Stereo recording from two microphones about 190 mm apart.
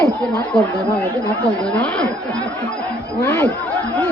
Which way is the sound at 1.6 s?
5° left (ahead or behind).